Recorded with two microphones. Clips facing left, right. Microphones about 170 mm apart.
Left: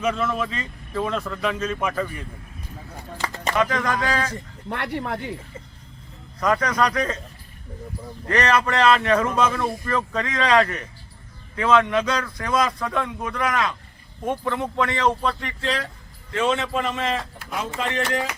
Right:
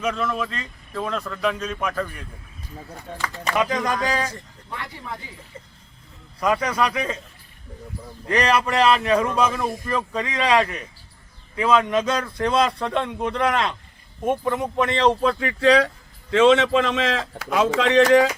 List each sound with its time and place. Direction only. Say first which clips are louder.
0.0 s speech: left 1 dB; centre (ahead or behind)
3.5 s speech: even; 15° right (ahead or behind)
4.7 s speech: left 7 dB; 70° left (ahead or behind)
6.4 s speech: even; 10° right (ahead or behind)
8.3 s speech: even; 10° right (ahead or behind); by 13.7 s 30° right (ahead or behind)
14.3 s speech: right 3 dB; 15° right (ahead or behind)
16.3 s a man's voice: right 7 dB; 90° right